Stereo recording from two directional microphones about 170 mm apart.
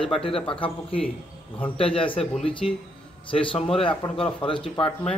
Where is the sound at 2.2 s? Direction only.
5° left (ahead or behind).